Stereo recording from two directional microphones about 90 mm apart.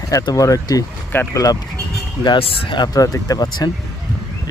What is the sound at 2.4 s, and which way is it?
Speech, 90° left.